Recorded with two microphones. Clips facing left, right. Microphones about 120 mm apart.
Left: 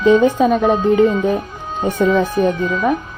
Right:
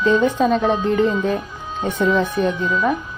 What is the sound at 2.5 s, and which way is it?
Speech, 50° left (ahead or behind).